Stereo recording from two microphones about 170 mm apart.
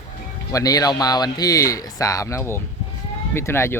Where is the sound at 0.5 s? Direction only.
20° left (ahead or behind).